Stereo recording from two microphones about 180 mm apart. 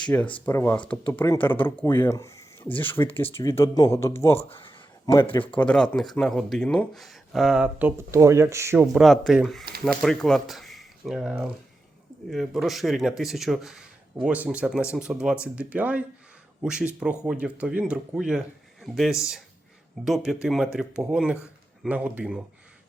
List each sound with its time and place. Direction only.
0.3 s speech: 10° left (ahead or behind)
4.4 s speech: 30° left (ahead or behind)
5.3 s speech: 10° left (ahead or behind); by 8.9 s 15° right (ahead or behind)
8.9 s speech: centre (ahead or behind)